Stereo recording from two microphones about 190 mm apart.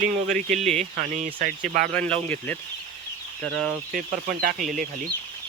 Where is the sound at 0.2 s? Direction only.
40° right (ahead or behind).